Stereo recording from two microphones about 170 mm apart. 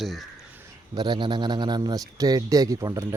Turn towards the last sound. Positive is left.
turn(degrees=-20)  # may be behind; listen again after turning